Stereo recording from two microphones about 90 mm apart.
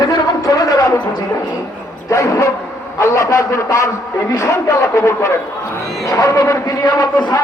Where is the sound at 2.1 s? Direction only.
35° left (ahead or behind).